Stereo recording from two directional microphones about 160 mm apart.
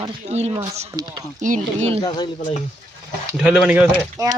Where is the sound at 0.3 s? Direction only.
40° right (ahead or behind).